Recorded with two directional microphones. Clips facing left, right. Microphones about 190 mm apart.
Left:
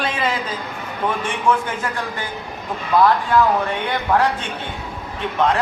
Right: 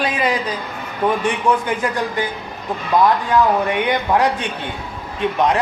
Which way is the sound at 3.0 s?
15° right (ahead or behind).